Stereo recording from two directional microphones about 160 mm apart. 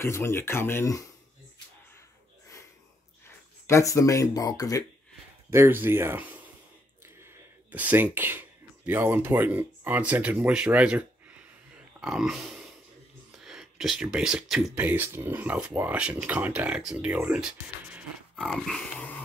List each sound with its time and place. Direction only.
0.0 s speech: 15° left (ahead or behind)
3.3 s speech: 15° left (ahead or behind)
5.5 s speech: 15° right (ahead or behind)
12.0 s grunt: 5° right (ahead or behind)
13.4 s speech: centre (ahead or behind)